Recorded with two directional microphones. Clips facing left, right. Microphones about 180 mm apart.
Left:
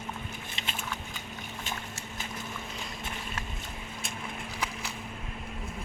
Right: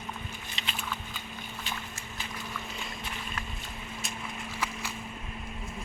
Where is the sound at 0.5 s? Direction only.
50° left (ahead or behind).